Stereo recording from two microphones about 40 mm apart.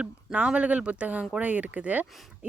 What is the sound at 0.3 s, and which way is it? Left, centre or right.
Speech, right.